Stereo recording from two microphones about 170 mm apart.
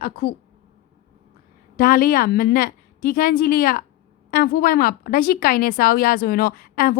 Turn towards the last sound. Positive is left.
turn(degrees=60)  # may be behind; listen again after turning